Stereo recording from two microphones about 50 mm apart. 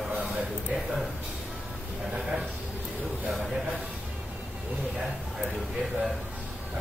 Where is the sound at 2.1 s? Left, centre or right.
Centre.